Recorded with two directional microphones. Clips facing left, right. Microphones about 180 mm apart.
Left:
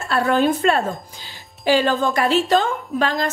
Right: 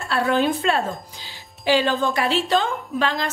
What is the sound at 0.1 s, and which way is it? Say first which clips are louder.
A woman's voice: left 2 dB; 40° left (ahead or behind).